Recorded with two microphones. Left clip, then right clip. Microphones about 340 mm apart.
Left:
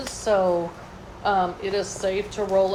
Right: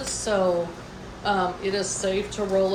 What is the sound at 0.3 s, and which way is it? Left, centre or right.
Speech, left.